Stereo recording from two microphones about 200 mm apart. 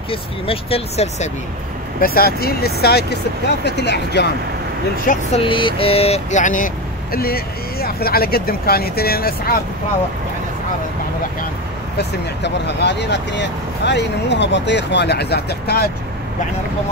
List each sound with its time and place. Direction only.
0.1 s speech: 30° left (ahead or behind)
2.0 s speech: 50° left (ahead or behind)
5.1 s speech: 45° left (ahead or behind)
5.5 s speech: 25° left (ahead or behind); by 9.6 s 50° left (ahead or behind)
12.0 s speech: 60° left (ahead or behind)